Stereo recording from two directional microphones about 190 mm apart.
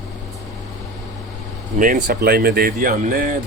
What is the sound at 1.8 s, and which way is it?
Speech, 45° right (ahead or behind).